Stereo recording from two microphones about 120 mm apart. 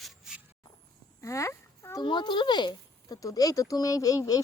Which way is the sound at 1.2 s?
25° left (ahead or behind).